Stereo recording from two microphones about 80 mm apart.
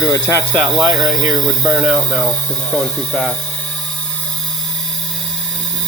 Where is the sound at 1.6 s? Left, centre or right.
Centre.